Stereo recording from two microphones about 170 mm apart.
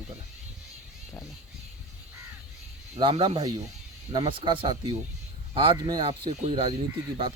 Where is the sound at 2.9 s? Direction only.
30° right (ahead or behind).